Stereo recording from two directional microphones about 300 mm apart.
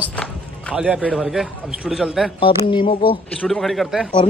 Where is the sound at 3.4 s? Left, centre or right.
Centre.